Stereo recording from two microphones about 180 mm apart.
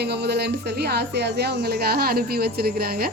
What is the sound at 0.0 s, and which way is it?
Speech, 65° right (ahead or behind).